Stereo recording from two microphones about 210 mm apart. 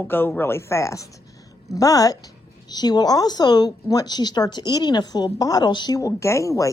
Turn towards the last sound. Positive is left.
turn(degrees=15)  # may be behind; listen again after turning